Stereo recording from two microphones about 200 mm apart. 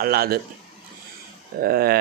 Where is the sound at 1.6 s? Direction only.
50° right (ahead or behind).